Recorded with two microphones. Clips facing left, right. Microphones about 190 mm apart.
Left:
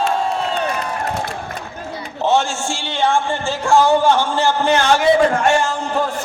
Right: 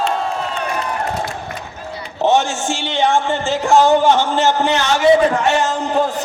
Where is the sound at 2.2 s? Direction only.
20° right (ahead or behind).